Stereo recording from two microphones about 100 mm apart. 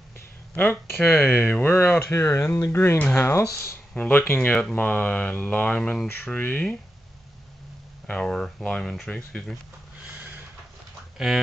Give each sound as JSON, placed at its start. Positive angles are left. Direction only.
{"t": 0.6, "sound": "speech", "side_deg": 20}
{"t": 3.9, "sound": "mantra", "side_deg": 20}
{"t": 8.1, "sound": "mantra", "side_deg": 10}
{"t": 8.9, "sound": "speech", "side_deg": 5}
{"t": 11.1, "sound": "speech", "side_deg": -5}